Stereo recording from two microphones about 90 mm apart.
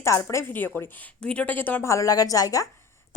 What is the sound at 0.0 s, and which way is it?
Speech, 35° left (ahead or behind).